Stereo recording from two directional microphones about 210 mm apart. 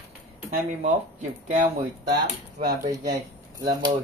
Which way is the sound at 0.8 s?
35° right (ahead or behind).